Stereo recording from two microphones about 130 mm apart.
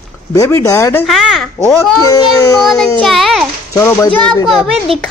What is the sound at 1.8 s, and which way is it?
Speech, 30° left (ahead or behind).